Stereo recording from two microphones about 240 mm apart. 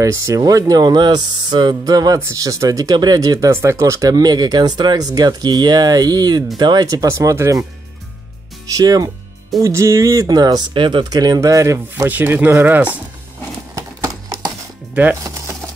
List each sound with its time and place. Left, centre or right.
0.0 s speech: centre
8.7 s speech: centre
13.7 s a sound: centre
15.0 s speech: centre